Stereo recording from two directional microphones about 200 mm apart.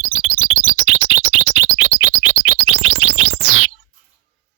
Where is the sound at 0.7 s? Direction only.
90° right.